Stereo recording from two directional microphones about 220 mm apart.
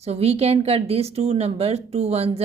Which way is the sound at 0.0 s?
30° right (ahead or behind).